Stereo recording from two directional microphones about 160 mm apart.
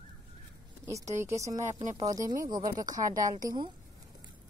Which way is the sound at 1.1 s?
20° right (ahead or behind).